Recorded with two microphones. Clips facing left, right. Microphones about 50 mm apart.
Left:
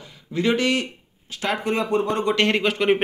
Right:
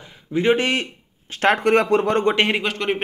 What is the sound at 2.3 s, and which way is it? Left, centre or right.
Speech, centre.